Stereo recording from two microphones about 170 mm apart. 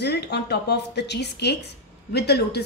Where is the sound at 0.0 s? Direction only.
80° left.